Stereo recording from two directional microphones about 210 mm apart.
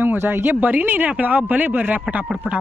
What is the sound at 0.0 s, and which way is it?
Speech, 10° right (ahead or behind).